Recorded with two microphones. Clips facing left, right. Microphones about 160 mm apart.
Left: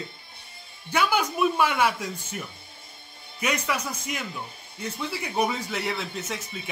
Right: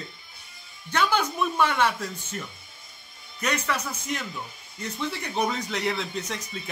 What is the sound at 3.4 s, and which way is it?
Speech, 10° left (ahead or behind).